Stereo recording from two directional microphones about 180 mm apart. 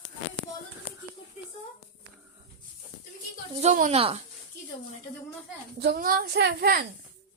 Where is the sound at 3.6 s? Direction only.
40° right (ahead or behind).